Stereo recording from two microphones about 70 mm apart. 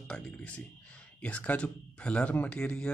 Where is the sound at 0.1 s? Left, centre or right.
Centre.